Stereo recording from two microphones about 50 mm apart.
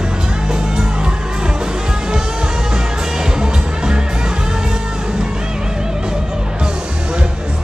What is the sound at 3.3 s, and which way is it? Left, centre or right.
Music, centre.